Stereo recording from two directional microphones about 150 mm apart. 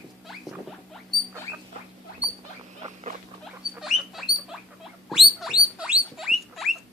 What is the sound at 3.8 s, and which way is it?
Rodents, centre (ahead or behind).